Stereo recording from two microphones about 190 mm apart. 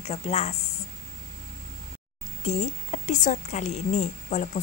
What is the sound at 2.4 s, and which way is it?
Speech, 35° left (ahead or behind).